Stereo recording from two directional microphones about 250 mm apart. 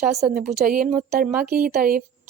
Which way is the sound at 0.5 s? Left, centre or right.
Right.